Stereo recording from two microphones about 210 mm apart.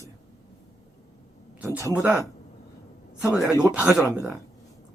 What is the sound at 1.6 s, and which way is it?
Speech, 10° right (ahead or behind).